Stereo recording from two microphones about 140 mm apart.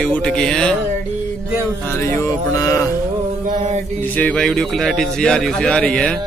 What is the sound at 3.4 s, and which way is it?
Mantra, 55° right (ahead or behind).